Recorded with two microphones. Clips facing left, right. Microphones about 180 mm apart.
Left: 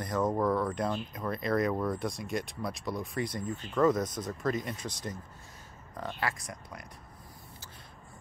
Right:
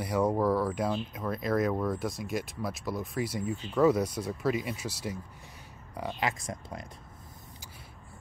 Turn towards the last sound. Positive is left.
turn(degrees=-25)  # may be behind; listen again after turning